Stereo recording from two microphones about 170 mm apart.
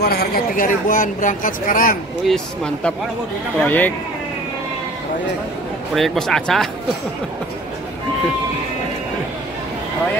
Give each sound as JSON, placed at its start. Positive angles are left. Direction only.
{"t": 0.0, "sound": "speech", "side_deg": 70}
{"t": 2.2, "sound": "speech", "side_deg": 5}
{"t": 5.9, "sound": "speech", "side_deg": 0}